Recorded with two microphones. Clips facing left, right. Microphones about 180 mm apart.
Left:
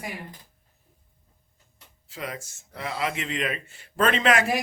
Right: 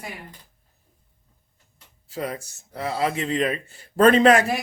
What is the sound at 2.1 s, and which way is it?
Speech, 35° right (ahead or behind).